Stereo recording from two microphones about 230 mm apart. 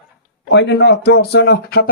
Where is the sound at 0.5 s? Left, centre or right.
Left.